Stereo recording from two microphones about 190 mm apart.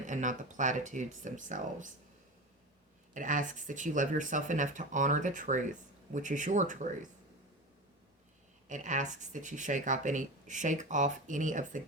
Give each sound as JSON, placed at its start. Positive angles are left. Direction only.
{"t": 0.0, "sound": "speech", "side_deg": -40}
{"t": 3.2, "sound": "speech", "side_deg": -45}
{"t": 8.7, "sound": "speech", "side_deg": -40}